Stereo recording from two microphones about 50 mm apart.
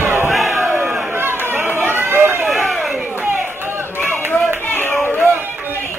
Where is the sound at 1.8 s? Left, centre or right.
Right.